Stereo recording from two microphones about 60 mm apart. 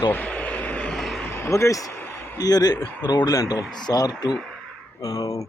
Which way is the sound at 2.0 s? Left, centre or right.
Left.